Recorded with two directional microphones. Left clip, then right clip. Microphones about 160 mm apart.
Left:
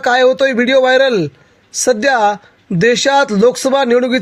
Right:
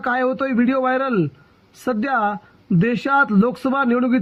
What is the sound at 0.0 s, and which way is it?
A man's voice, 50° left (ahead or behind).